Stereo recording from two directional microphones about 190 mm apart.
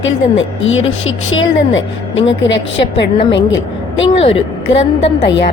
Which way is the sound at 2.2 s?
75° left (ahead or behind).